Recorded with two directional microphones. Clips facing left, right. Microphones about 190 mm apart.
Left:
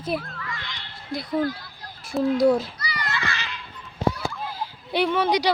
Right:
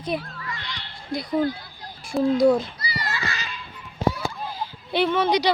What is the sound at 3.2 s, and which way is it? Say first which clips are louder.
Children playing: left 1 dB; 40° right (ahead or behind).